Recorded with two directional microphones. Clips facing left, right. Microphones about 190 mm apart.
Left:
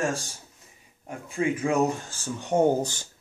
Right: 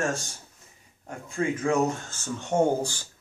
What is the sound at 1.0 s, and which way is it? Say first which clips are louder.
Speech: left 1 dB; 15° left (ahead or behind).